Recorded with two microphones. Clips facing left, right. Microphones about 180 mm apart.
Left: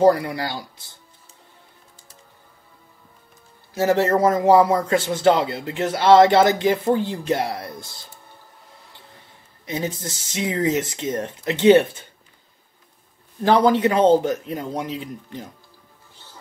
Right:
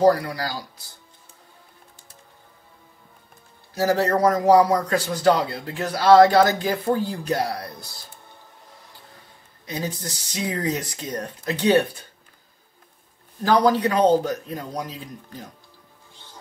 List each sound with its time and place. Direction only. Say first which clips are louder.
0.0 s a man's voice: left 2 dB; 25° left (ahead or behind)
3.7 s a man's voice: left 2 dB; 25° left (ahead or behind)
9.7 s a man's voice: left 3 dB; 25° left (ahead or behind)
13.4 s a man's voice: left 2 dB; 25° left (ahead or behind)